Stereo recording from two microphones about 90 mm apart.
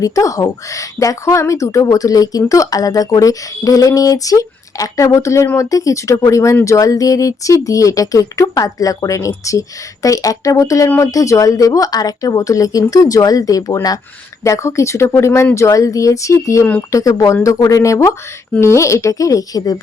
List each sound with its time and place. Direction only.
0.0 s speech: 40° left (ahead or behind)